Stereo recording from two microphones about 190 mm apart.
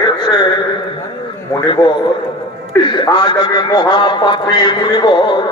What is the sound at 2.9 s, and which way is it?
A man's voice, 25° left (ahead or behind).